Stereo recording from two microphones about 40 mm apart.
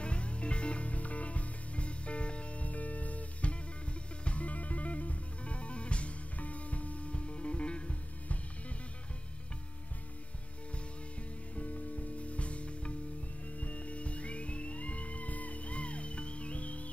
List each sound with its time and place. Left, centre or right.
0.0 s music: left
11.5 s music: left